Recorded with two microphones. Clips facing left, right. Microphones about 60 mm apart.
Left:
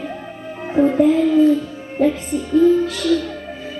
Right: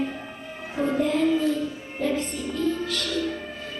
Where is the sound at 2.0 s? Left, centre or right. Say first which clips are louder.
Left 9 dB; left.